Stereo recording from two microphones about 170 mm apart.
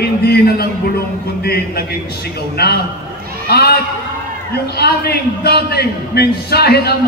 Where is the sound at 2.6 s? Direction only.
70° left (ahead or behind).